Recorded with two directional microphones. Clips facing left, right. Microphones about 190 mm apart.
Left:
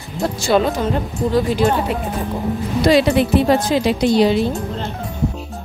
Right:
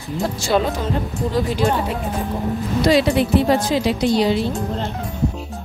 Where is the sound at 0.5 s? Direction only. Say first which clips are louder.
Left 3 dB; 75° left (ahead or behind).